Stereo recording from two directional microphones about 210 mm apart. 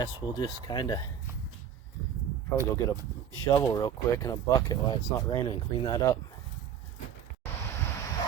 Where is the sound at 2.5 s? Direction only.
10° left (ahead or behind).